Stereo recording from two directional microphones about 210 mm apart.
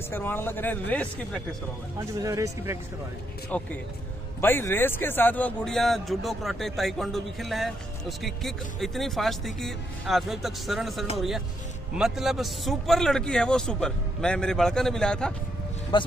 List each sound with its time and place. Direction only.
0.1 s speech: 10° left (ahead or behind)
2.0 s speech: 15° right (ahead or behind)
3.5 s a man's voice: 5° left (ahead or behind)
15.9 s a man's voice: 20° left (ahead or behind)